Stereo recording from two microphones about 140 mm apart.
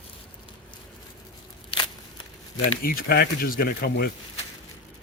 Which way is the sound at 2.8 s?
90° left.